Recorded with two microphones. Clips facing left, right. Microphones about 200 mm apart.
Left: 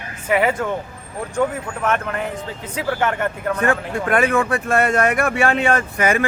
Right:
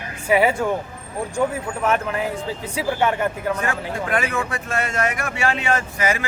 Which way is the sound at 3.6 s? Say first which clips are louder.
Left 5 dB; 55° left (ahead or behind).